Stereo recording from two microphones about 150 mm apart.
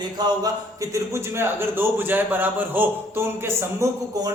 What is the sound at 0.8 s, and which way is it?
A man's voice, 15° right (ahead or behind).